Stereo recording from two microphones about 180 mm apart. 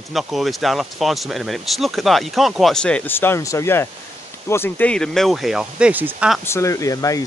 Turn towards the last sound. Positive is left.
turn(degrees=20)  # may be behind; listen again after turning